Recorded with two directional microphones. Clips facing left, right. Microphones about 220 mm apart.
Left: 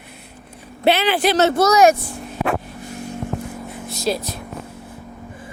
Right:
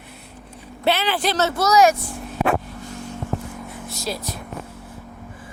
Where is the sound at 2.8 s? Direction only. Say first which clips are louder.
Left 2 dB; 10° left (ahead or behind).